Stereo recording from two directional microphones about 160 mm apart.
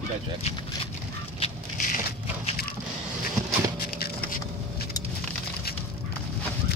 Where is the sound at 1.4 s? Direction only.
50° left (ahead or behind).